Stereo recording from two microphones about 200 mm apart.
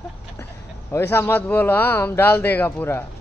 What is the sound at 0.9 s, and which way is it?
A man's voice, 10° left (ahead or behind).